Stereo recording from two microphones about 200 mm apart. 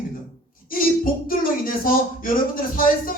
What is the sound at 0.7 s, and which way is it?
Speech, 45° left (ahead or behind).